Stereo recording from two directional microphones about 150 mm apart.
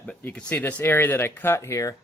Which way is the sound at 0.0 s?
10° left (ahead or behind).